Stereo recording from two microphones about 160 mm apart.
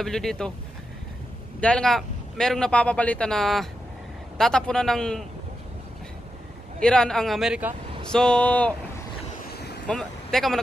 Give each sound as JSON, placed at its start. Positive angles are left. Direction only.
{"t": 0.0, "sound": "a man's voice", "side_deg": 5}
{"t": 1.6, "sound": "a man's voice", "side_deg": 5}
{"t": 6.8, "sound": "a man's voice", "side_deg": 5}
{"t": 9.5, "sound": "vehicle", "side_deg": 90}
{"t": 9.8, "sound": "speech", "side_deg": 5}